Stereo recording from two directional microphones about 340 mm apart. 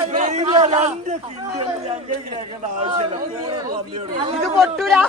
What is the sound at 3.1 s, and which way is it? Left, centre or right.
Speech, centre.